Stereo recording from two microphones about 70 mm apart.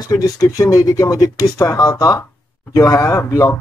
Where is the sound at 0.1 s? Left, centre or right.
Left.